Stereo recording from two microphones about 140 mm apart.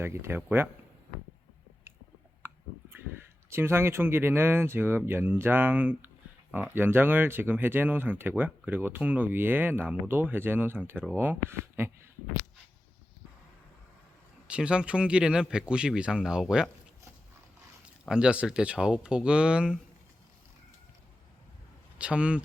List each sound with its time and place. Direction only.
0.0 s speech: 15° right (ahead or behind)
2.4 s a sound: 15° right (ahead or behind)
3.5 s speech: 15° right (ahead or behind)
14.4 s speech: 5° right (ahead or behind)
18.1 s speech: 5° right (ahead or behind)
21.9 s speech: 10° right (ahead or behind)